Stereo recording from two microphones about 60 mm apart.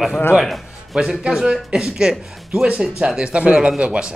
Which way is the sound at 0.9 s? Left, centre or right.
Centre.